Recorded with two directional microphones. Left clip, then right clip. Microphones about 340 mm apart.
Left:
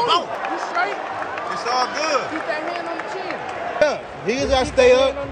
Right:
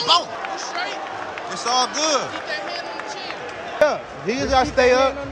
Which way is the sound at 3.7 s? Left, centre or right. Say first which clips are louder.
Right 1 dB; centre.